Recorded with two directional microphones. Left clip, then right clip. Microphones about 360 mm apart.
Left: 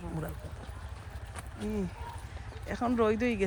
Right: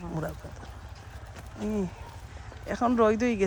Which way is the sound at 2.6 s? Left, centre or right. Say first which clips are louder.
Right 5 dB; centre.